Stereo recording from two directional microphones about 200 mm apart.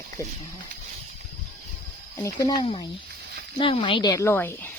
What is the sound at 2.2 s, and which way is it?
Speech, 20° left (ahead or behind).